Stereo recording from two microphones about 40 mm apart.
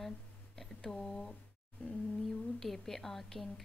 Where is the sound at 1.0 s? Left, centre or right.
Centre.